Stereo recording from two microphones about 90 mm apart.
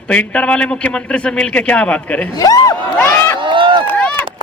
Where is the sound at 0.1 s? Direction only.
15° left (ahead or behind).